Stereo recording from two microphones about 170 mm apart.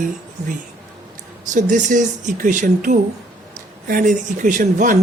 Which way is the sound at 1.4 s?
45° right (ahead or behind).